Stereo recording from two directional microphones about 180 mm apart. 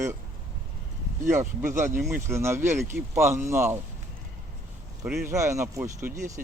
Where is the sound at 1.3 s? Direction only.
15° right (ahead or behind).